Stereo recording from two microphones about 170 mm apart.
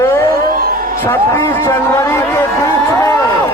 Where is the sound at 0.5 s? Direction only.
60° right (ahead or behind).